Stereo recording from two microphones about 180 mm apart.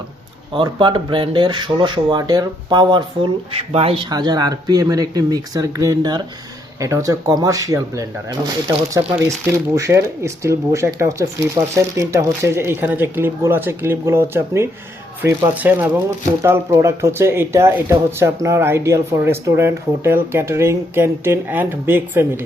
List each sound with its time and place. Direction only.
0.5 s speech: 25° right (ahead or behind)
4.1 s speech: 20° right (ahead or behind)